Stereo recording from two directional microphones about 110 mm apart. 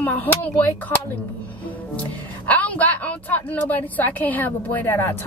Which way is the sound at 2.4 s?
15° left (ahead or behind).